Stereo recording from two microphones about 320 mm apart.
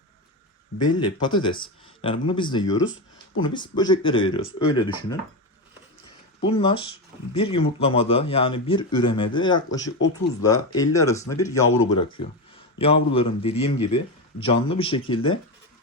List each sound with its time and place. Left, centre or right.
0.8 s speech: centre
6.4 s speech: centre
12.8 s speech: centre